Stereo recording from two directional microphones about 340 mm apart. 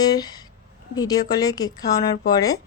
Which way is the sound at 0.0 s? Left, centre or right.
Centre.